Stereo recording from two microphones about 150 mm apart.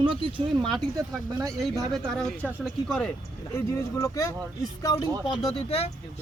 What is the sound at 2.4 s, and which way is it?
Speech, centre (ahead or behind).